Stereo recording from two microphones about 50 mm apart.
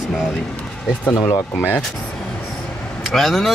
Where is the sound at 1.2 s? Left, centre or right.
Left.